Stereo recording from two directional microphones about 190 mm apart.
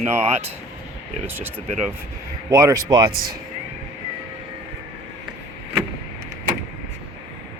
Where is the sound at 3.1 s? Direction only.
50° right (ahead or behind).